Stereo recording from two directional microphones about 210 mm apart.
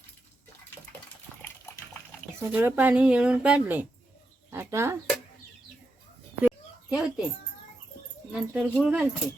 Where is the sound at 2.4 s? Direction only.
10° right (ahead or behind).